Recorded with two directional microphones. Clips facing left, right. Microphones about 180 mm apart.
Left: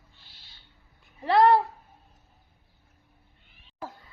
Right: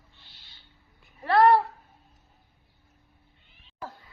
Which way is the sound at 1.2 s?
15° left (ahead or behind).